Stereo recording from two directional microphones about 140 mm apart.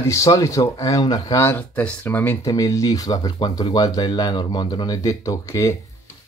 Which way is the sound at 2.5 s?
25° left (ahead or behind).